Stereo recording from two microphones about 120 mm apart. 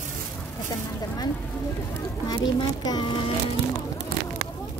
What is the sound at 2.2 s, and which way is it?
Speech, 35° left (ahead or behind).